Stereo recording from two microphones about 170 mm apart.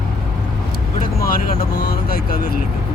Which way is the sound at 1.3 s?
65° left (ahead or behind).